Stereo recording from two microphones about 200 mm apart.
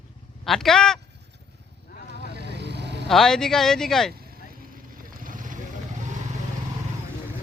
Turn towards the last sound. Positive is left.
turn(degrees=-40)  # may be behind; listen again after turning